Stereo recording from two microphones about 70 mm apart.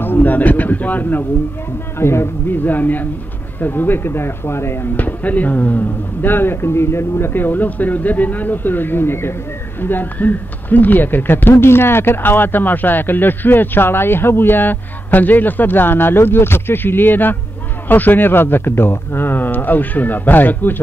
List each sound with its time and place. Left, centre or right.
0.0 s speech: left
2.0 s speech: left
2.6 s speech: left
4.9 s speech: left